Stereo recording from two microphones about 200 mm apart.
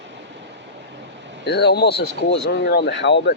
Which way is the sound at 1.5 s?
55° left (ahead or behind).